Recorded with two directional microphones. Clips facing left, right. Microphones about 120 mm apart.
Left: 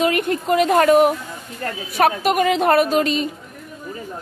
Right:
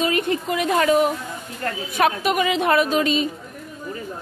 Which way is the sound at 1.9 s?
40° left (ahead or behind).